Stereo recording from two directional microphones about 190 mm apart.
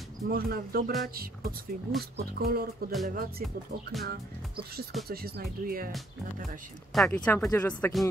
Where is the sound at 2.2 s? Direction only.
55° right (ahead or behind).